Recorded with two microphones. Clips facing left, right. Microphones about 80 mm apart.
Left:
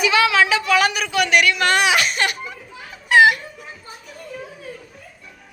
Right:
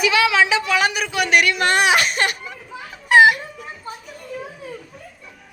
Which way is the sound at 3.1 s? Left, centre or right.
Right.